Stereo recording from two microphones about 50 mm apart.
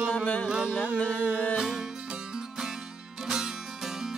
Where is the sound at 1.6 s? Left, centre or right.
Centre.